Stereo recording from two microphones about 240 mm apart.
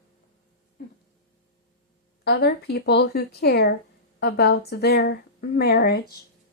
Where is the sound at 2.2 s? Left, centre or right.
Left.